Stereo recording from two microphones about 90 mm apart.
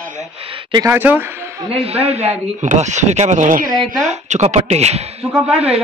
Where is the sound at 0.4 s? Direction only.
90° right.